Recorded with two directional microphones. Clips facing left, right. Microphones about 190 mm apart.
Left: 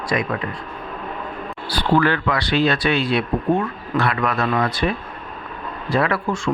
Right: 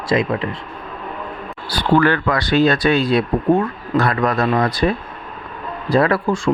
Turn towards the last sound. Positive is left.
turn(degrees=-35)  # may be behind; listen again after turning